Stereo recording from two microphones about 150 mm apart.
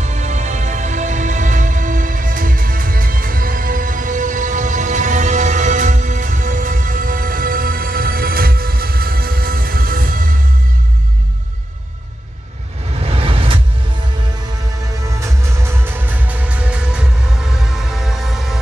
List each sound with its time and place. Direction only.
0.0 s music: 50° right (ahead or behind); by 10.2 s 75° right (ahead or behind)
13.0 s a sound: 40° right (ahead or behind)
15.0 s music: 20° right (ahead or behind); by 18.6 s centre (ahead or behind)